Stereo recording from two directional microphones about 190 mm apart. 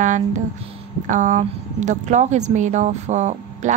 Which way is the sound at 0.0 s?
40° right (ahead or behind).